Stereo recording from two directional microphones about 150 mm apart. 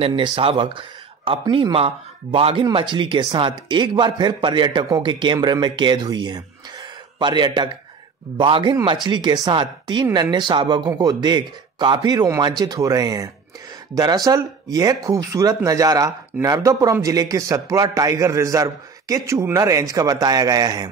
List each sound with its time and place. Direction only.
0.0 s speech: 35° right (ahead or behind)